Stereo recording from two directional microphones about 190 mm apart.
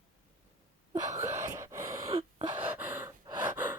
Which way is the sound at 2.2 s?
30° right (ahead or behind).